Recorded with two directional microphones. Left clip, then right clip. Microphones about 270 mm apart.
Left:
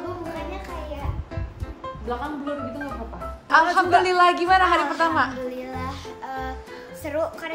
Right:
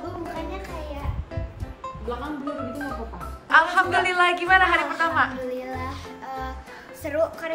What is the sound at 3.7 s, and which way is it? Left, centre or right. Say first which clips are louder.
A woman's voice: left 3 dB; centre.